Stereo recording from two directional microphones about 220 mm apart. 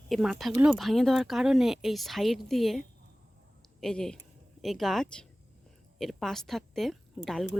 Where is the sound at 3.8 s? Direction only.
5° left (ahead or behind).